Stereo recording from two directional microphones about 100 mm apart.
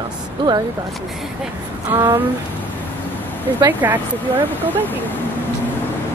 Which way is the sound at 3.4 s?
20° right (ahead or behind).